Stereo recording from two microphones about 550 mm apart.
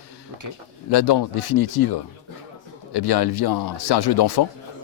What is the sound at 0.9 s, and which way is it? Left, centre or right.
Speech, left.